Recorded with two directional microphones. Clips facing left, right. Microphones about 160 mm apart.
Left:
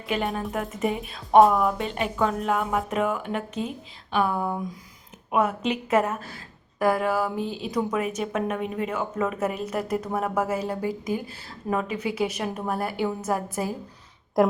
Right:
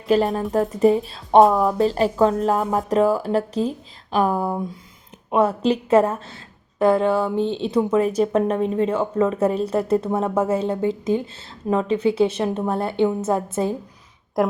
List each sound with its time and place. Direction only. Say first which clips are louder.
0.1 s a woman's voice: right 9 dB; 35° right (ahead or behind)
14.4 s a woman's voice: even; centre (ahead or behind)